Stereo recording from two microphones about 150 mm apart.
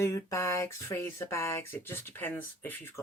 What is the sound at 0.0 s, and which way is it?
Speech, 20° left (ahead or behind).